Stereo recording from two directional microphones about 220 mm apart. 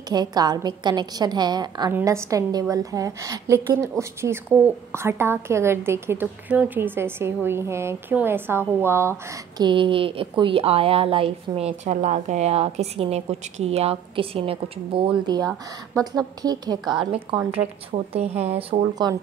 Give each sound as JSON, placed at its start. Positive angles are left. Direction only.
{"t": 0.1, "sound": "a woman's voice", "side_deg": -20}